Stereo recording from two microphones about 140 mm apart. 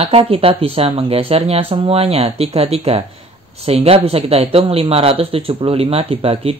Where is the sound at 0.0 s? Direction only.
45° right (ahead or behind).